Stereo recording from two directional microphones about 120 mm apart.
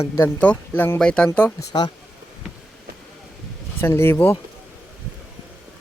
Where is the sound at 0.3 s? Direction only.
10° left (ahead or behind).